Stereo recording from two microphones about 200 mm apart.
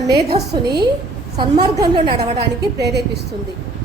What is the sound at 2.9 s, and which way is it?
Speech, 55° right (ahead or behind).